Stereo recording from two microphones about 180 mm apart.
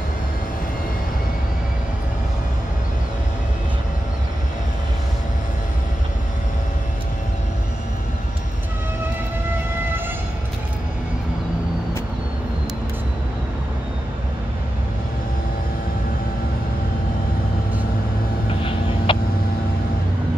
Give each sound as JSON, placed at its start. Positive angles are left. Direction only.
{"t": 18.6, "sound": "vehicle", "side_deg": 30}